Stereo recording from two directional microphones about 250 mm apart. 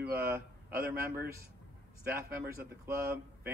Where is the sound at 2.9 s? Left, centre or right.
Right.